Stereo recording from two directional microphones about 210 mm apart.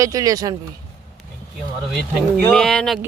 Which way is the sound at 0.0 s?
15° right (ahead or behind).